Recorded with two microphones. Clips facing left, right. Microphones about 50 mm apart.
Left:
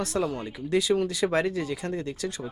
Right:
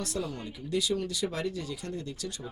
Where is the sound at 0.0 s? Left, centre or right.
Left.